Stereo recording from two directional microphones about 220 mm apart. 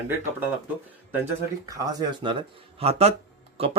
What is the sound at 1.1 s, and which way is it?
Speech, 10° right (ahead or behind).